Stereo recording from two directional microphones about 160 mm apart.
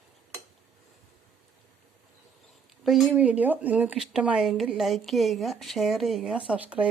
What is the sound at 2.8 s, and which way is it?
Speech, centre (ahead or behind).